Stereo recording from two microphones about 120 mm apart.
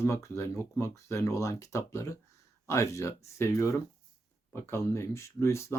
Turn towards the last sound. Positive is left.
turn(degrees=25)  # may be behind; listen again after turning